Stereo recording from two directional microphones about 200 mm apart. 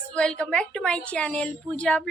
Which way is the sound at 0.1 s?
5° left (ahead or behind).